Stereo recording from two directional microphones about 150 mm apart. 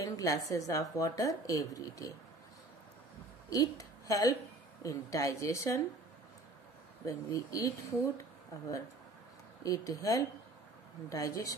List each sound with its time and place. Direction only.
0.0 s a woman's voice: 20° left (ahead or behind)
3.4 s a woman's voice: 25° left (ahead or behind)
7.1 s a woman's voice: 20° left (ahead or behind)
9.6 s a woman's voice: 20° left (ahead or behind)